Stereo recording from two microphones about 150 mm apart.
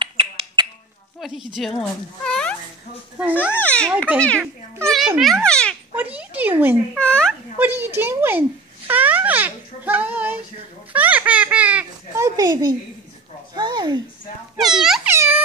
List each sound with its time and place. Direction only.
0.0 s finger snapping: 35° right (ahead or behind)
1.2 s speech: centre (ahead or behind)
3.5 s a child's voice: 10° left (ahead or behind)
4.8 s a child's voice: centre (ahead or behind)
5.9 s speech: 10° right (ahead or behind)
7.0 s a child's voice: 5° left (ahead or behind)
7.5 s a child's voice: 15° right (ahead or behind)
12.4 s a woman's voice: 25° right (ahead or behind)
14.6 s speech: centre (ahead or behind)
15.0 s speech: 15° right (ahead or behind)